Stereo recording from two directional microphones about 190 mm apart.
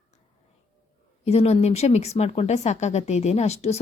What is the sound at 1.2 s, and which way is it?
A woman's voice, 35° left (ahead or behind).